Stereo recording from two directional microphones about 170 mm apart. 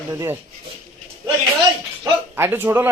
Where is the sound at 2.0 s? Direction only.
15° right (ahead or behind).